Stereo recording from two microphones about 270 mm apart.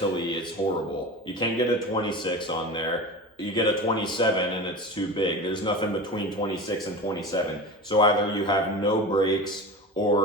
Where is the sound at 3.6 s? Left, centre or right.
Centre.